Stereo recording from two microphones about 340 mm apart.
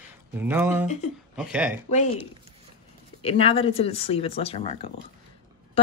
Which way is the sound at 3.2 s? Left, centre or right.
Centre.